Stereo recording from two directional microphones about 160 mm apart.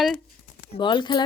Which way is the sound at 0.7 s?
30° left (ahead or behind).